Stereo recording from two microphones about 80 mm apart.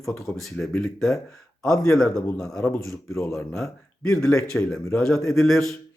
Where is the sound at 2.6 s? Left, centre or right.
Left.